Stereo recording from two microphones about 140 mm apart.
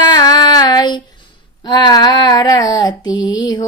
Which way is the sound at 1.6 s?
30° left (ahead or behind).